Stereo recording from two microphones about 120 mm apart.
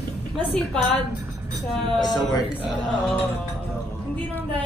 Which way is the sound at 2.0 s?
35° left (ahead or behind).